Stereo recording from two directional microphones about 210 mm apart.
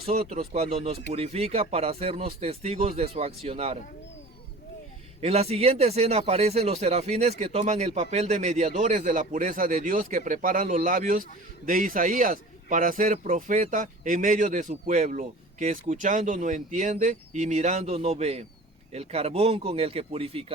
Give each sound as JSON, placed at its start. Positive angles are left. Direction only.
{"t": 0.0, "sound": "speech", "side_deg": -30}
{"t": 5.2, "sound": "speech", "side_deg": -30}